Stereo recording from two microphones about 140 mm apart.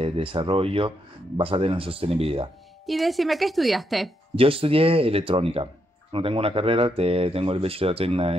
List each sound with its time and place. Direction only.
0.0 s speech: 40° right (ahead or behind)
2.9 s a woman's voice: centre (ahead or behind)
4.4 s speech: 40° right (ahead or behind)